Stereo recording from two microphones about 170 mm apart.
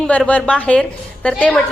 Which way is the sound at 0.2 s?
5° left (ahead or behind).